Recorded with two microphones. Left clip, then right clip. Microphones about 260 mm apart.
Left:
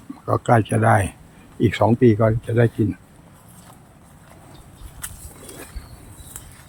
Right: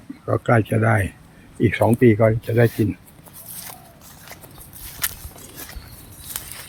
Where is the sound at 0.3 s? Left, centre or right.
Centre.